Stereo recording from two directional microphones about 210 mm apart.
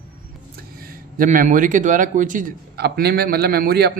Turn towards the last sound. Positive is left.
turn(degrees=-50)  # may be behind; listen again after turning